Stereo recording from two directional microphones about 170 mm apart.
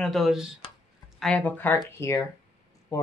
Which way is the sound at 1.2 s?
10° left (ahead or behind).